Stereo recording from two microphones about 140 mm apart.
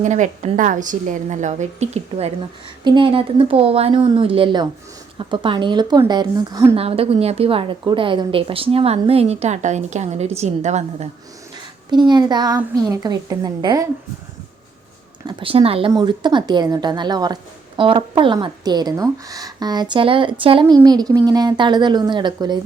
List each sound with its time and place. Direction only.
0.0 s a woman's voice: 60° right (ahead or behind)
2.8 s a woman's voice: 35° right (ahead or behind)
6.7 s a woman's voice: 45° right (ahead or behind)
11.9 s a woman's voice: 30° right (ahead or behind)
15.3 s a woman's voice: 40° right (ahead or behind)
15.9 s a woman's voice: 30° right (ahead or behind)